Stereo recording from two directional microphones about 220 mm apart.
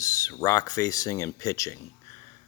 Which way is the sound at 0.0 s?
15° left (ahead or behind).